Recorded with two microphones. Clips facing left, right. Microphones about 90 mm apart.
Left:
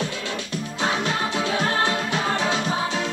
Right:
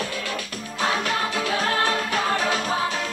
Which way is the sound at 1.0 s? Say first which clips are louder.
Left 1 dB; 30° left (ahead or behind).